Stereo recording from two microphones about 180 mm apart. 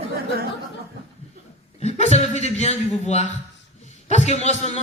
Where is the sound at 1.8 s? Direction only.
40° left (ahead or behind).